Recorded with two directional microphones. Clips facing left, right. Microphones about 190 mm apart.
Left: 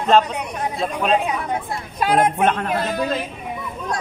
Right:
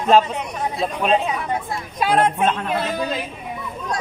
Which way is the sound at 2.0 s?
10° left (ahead or behind).